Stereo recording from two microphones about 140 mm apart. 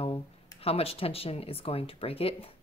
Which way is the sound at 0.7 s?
45° left (ahead or behind).